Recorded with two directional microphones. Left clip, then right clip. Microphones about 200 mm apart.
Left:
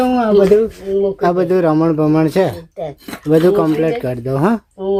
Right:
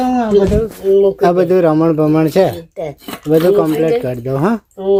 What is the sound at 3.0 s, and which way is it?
Speech, 20° right (ahead or behind).